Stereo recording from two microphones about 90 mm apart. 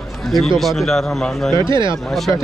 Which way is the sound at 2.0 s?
Centre (ahead or behind).